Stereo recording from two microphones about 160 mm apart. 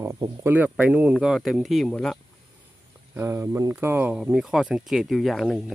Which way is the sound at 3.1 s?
15° right (ahead or behind).